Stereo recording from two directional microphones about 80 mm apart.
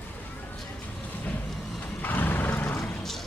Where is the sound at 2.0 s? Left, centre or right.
Left.